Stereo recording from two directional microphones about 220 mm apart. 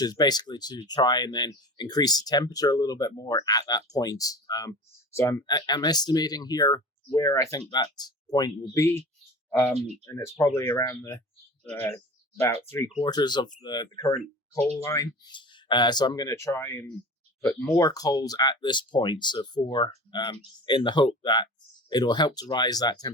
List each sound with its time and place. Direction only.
0.0 s speech: 20° left (ahead or behind)
10.1 s speech: 20° left (ahead or behind)
13.0 s speech: 20° left (ahead or behind)